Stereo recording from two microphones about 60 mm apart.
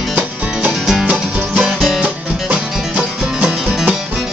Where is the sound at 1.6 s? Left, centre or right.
Centre.